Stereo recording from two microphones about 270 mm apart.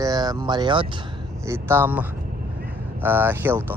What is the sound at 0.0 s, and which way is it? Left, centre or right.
Speech, centre.